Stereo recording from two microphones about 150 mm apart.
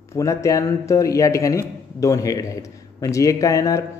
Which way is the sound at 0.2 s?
20° left (ahead or behind).